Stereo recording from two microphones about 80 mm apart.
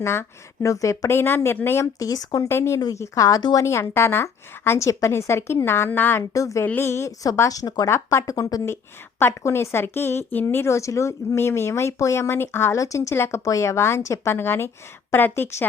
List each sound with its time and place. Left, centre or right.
0.0 s speech: left
2.0 s speech: left
2.5 s speech: left
3.6 s speech: left
6.3 s speech: left
7.9 s speech: left
8.6 s a woman's voice: left
12.7 s a woman's voice: left